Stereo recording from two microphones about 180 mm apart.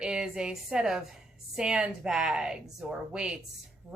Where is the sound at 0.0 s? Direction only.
5° right (ahead or behind).